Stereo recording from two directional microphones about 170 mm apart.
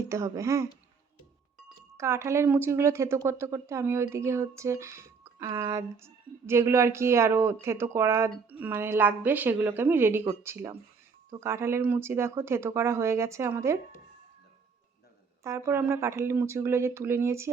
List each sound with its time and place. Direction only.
0.0 s speech: 15° right (ahead or behind)
2.0 s speech: 15° right (ahead or behind)
15.4 s speech: 15° right (ahead or behind)